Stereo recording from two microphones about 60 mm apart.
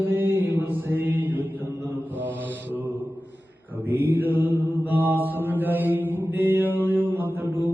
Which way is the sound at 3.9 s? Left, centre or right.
Right.